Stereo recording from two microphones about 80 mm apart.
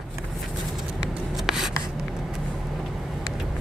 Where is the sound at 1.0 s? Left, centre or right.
Centre.